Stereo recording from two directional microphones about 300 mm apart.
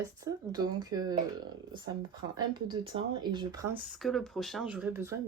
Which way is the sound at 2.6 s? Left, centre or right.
Centre.